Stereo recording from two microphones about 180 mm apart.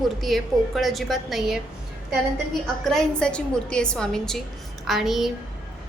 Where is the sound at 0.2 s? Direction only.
Centre (ahead or behind).